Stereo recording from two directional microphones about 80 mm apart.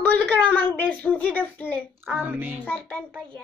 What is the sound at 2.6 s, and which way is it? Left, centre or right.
Speech, left.